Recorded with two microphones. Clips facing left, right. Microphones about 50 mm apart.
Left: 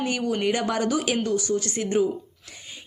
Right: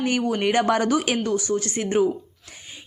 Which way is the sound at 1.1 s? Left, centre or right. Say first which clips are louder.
Right 1 dB; right.